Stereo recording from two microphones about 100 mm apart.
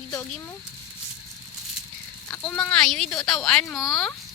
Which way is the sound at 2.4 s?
10° left (ahead or behind).